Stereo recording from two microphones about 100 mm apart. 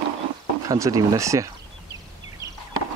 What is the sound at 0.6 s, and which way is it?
Speech, 35° right (ahead or behind).